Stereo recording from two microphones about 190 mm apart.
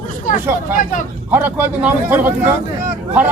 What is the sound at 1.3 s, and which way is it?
Speech, 10° right (ahead or behind).